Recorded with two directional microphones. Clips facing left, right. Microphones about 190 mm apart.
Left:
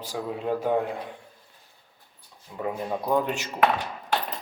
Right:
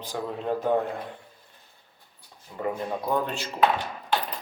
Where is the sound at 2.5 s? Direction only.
10° left (ahead or behind).